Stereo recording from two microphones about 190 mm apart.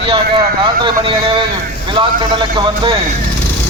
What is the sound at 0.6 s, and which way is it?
A man's voice, 25° right (ahead or behind).